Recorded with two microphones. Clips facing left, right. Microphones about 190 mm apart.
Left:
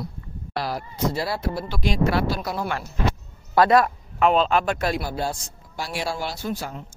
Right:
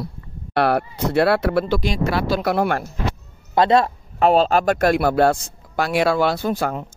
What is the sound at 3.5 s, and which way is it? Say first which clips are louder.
A man's voice: right 1 dB; 25° right (ahead or behind).